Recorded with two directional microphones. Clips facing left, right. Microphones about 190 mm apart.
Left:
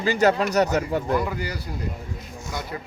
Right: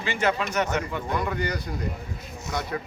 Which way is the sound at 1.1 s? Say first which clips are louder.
Left 2 dB; 5° left (ahead or behind).